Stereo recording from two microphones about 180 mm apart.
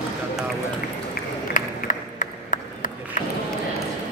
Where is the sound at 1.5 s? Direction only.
45° left (ahead or behind).